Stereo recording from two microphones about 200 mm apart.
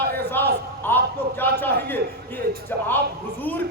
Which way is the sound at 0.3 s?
10° left (ahead or behind).